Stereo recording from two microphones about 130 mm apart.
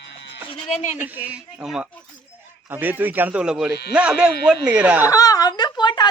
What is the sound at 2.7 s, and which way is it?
Speech, 15° right (ahead or behind).